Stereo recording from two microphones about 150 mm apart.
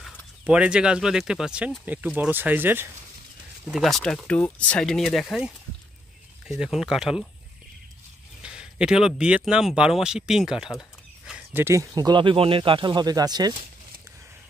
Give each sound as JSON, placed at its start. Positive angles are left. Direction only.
{"t": 0.5, "sound": "speech", "side_deg": -5}
{"t": 3.6, "sound": "speech", "side_deg": 0}
{"t": 8.4, "sound": "speech", "side_deg": -5}
{"t": 10.8, "sound": "a sound", "side_deg": -5}
{"t": 11.6, "sound": "speech", "side_deg": -20}